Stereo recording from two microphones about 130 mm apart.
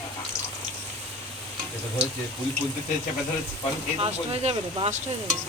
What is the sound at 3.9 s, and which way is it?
Speech, 45° right (ahead or behind).